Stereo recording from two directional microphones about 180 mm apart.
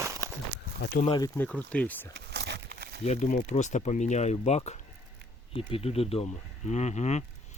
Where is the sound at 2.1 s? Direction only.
65° right (ahead or behind).